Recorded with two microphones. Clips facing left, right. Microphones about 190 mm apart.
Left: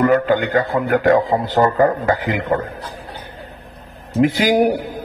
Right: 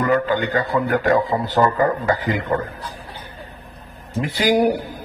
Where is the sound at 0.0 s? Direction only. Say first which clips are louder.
Left 4 dB; 50° left (ahead or behind).